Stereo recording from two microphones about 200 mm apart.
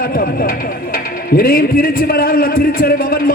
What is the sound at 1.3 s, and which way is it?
A man's voice, 45° left (ahead or behind).